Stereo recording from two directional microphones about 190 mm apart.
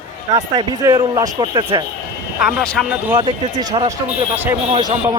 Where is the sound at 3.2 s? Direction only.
25° right (ahead or behind).